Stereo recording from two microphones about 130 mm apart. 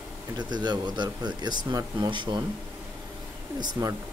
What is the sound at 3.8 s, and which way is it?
Speech, 30° right (ahead or behind).